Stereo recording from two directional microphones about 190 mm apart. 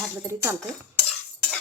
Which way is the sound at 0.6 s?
5° left (ahead or behind).